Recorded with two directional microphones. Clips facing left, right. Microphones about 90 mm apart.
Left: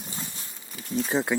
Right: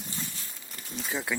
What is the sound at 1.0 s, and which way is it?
Speech, 30° left (ahead or behind).